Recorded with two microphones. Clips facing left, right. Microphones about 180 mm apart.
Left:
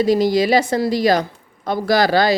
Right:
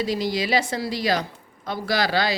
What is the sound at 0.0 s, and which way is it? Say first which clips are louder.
A woman's voice: left 9 dB; 45° left (ahead or behind).